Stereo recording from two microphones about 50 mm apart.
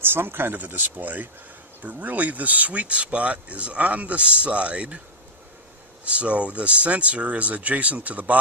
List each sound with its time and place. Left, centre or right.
0.1 s speech: right
6.0 s speech: right